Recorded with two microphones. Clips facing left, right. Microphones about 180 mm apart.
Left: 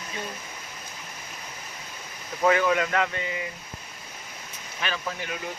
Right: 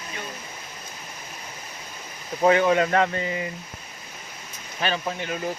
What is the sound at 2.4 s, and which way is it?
Speech, 30° right (ahead or behind).